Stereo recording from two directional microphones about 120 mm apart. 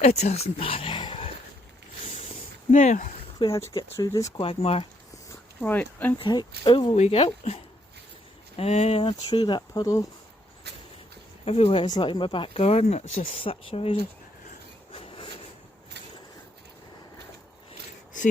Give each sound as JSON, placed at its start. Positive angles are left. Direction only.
{"t": 0.0, "sound": "speech", "side_deg": 65}
{"t": 2.7, "sound": "speech", "side_deg": 90}
{"t": 3.3, "sound": "speech", "side_deg": 35}
{"t": 4.4, "sound": "speech", "side_deg": 50}
{"t": 5.5, "sound": "speech", "side_deg": 15}
{"t": 6.1, "sound": "speech", "side_deg": 40}
{"t": 6.9, "sound": "speech", "side_deg": 65}
{"t": 8.5, "sound": "speech", "side_deg": 60}
{"t": 9.3, "sound": "speech", "side_deg": 40}
{"t": 9.8, "sound": "speech", "side_deg": 25}
{"t": 11.4, "sound": "speech", "side_deg": 55}
{"t": 11.9, "sound": "speech", "side_deg": 40}